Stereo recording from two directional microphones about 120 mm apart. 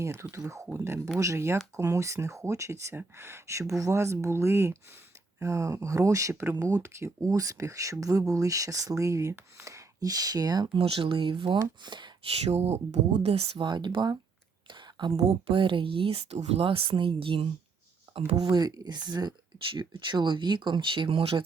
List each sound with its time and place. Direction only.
0.0 s speech: 25° right (ahead or behind)
10.8 s speech: 50° right (ahead or behind)
12.5 s speech: 65° right (ahead or behind)
13.6 s speech: 35° right (ahead or behind)
14.7 s a sound: 40° right (ahead or behind)
15.3 s speech: 45° right (ahead or behind)
18.4 s speech: 35° right (ahead or behind); by 21.4 s 50° right (ahead or behind)